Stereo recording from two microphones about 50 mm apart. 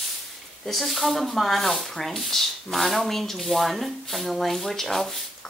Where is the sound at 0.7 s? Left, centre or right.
Centre.